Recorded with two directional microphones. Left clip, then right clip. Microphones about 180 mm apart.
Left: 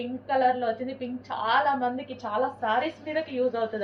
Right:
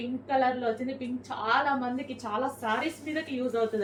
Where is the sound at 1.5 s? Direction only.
15° right (ahead or behind).